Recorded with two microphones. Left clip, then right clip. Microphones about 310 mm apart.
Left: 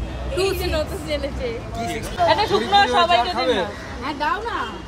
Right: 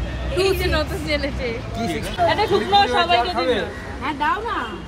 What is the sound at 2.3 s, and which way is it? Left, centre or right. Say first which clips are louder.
Speech: left 1 dB; left.